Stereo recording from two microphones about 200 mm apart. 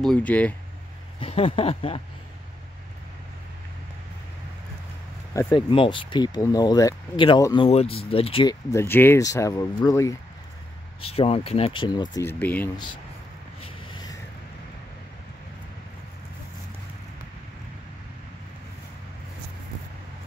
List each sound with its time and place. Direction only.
0.0 s speech: 5° left (ahead or behind)
1.2 s speech: 30° left (ahead or behind)
5.3 s speech: 20° left (ahead or behind)
8.7 s speech: 10° left (ahead or behind)
11.0 s speech: 30° left (ahead or behind); by 12.6 s 10° left (ahead or behind)
13.6 s a sound: 25° left (ahead or behind)